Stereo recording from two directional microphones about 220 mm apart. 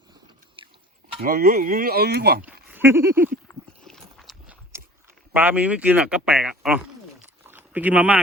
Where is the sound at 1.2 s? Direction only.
40° right (ahead or behind).